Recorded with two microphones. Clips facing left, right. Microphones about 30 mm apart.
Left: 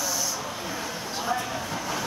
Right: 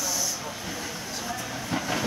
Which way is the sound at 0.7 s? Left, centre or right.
Left.